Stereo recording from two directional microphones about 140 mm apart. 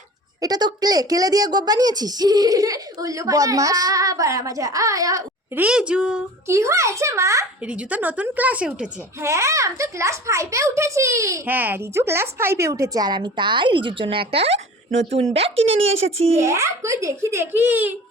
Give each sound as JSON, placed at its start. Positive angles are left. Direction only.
{"t": 0.4, "sound": "a child's voice", "side_deg": -30}
{"t": 5.5, "sound": "a woman's voice", "side_deg": -10}
{"t": 6.5, "sound": "a child's voice", "side_deg": -20}
{"t": 7.7, "sound": "a woman's voice", "side_deg": -10}
{"t": 9.2, "sound": "a child's voice", "side_deg": -20}
{"t": 16.4, "sound": "a child's voice", "side_deg": -20}